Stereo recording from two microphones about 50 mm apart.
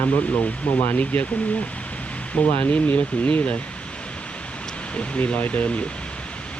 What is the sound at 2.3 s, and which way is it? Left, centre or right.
Speech, left.